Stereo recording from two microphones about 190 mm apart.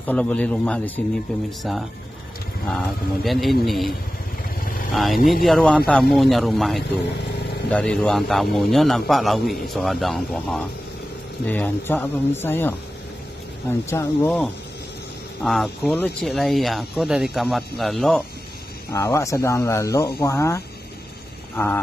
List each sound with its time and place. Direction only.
0.0 s a man's voice: 5° left (ahead or behind)
3.3 s a man's voice: centre (ahead or behind)
4.9 s a man's voice: centre (ahead or behind)
15.4 s a man's voice: centre (ahead or behind)
18.9 s speech: 15° left (ahead or behind)